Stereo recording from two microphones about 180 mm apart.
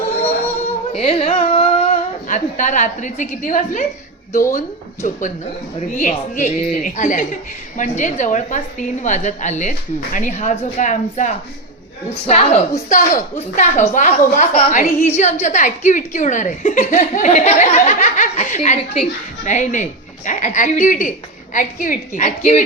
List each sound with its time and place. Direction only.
0.9 s a woman's voice: 35° left (ahead or behind)
5.0 s a woman's voice: 45° left (ahead or behind)